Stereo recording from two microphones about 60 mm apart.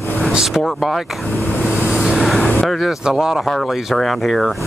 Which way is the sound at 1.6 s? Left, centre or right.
Centre.